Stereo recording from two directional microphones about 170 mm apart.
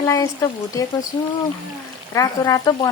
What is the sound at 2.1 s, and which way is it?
Speech, 25° left (ahead or behind).